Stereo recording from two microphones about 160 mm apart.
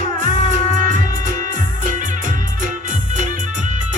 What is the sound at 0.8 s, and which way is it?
Music, 50° right (ahead or behind).